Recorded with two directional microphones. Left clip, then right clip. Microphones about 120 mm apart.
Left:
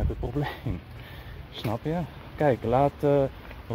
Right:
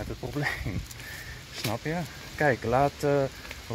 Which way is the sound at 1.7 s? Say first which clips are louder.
Left 3 dB; 5° left (ahead or behind).